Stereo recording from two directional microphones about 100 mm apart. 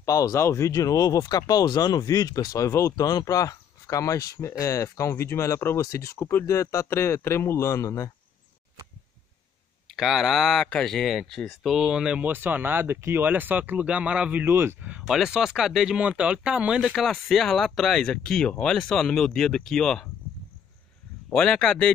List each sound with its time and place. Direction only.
0.0 s speech: 35° left (ahead or behind)
9.8 s speech: centre (ahead or behind); by 14.8 s 25° right (ahead or behind)
14.8 s speech: 10° right (ahead or behind); by 20.1 s 5° left (ahead or behind)
21.3 s speech: 5° left (ahead or behind)